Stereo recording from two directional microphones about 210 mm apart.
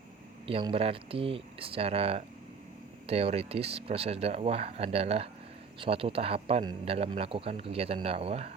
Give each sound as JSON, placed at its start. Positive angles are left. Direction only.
{"t": 0.4, "sound": "speech", "side_deg": -25}